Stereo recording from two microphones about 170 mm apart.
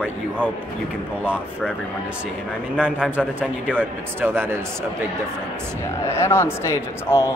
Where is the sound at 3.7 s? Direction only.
10° right (ahead or behind).